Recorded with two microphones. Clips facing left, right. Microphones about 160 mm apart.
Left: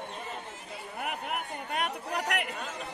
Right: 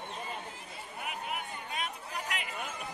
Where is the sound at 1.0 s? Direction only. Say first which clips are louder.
Left 4 dB; 60° left (ahead or behind).